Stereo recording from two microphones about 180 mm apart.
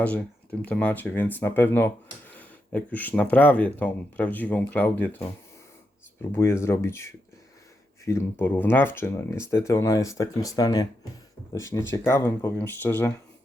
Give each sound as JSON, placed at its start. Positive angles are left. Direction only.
{"t": 0.6, "sound": "speech", "side_deg": 10}
{"t": 6.3, "sound": "speech", "side_deg": 15}